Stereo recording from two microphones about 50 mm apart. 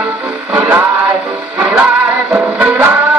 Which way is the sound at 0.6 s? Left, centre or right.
Right.